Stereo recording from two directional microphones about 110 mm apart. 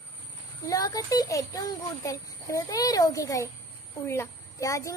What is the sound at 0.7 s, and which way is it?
A child's voice, 35° left (ahead or behind).